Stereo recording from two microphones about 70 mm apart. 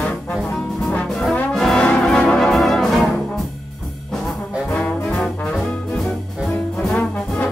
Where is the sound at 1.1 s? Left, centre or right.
Centre.